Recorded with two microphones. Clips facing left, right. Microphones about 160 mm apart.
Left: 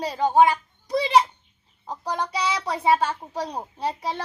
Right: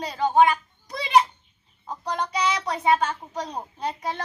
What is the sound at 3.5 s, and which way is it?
Speech, 15° left (ahead or behind).